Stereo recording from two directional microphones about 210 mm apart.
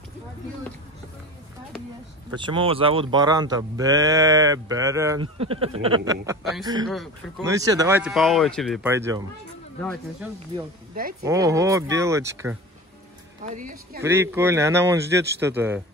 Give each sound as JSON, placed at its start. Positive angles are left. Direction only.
{"t": 2.3, "sound": "speech", "side_deg": -25}
{"t": 5.4, "sound": "speech", "side_deg": -30}
{"t": 6.9, "sound": "speech", "side_deg": 0}
{"t": 7.4, "sound": "speech", "side_deg": -15}
{"t": 8.1, "sound": "speech", "side_deg": 0}
{"t": 8.8, "sound": "speech", "side_deg": -15}
{"t": 11.2, "sound": "speech", "side_deg": -15}
{"t": 13.6, "sound": "speech", "side_deg": -40}
{"t": 14.0, "sound": "speech", "side_deg": -10}